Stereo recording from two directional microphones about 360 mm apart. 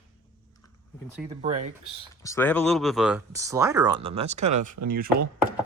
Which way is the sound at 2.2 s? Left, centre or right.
Centre.